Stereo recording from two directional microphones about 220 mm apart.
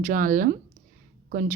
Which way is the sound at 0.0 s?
40° right (ahead or behind).